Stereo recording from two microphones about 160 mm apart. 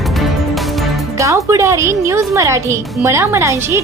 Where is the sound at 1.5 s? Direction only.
20° right (ahead or behind).